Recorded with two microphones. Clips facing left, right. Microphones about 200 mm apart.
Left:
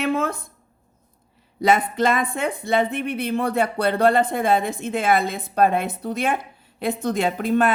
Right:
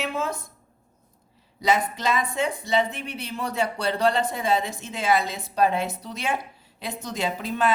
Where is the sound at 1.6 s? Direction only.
55° left (ahead or behind).